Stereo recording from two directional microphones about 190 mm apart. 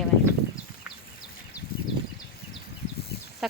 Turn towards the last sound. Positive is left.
turn(degrees=0)  # may be behind; listen again after turning